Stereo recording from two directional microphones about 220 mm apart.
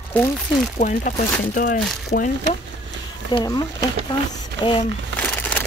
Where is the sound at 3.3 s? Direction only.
20° left (ahead or behind).